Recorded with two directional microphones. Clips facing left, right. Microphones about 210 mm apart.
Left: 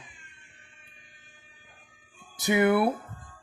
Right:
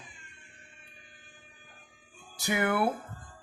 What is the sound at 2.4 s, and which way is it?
Speech, 20° left (ahead or behind).